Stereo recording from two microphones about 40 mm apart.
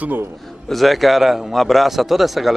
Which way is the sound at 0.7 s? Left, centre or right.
Centre.